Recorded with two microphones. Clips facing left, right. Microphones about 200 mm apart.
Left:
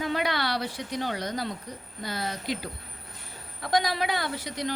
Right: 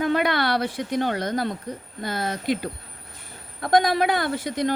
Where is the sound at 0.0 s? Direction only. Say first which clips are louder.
Right 6 dB; 55° right (ahead or behind).